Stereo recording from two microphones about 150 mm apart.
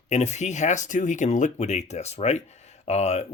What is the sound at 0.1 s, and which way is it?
Speech, 50° left (ahead or behind).